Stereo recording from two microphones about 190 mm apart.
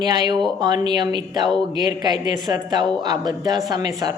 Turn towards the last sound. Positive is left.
turn(degrees=-20)  # may be behind; listen again after turning